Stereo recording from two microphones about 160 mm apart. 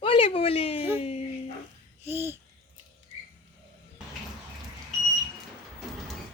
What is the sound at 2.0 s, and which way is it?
Babbling, 15° right (ahead or behind).